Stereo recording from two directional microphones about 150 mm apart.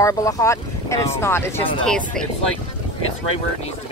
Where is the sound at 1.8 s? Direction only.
5° left (ahead or behind).